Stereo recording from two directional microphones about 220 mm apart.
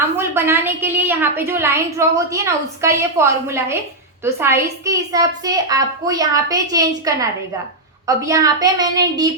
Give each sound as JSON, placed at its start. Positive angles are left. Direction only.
{"t": 0.2, "sound": "a woman's voice", "side_deg": -10}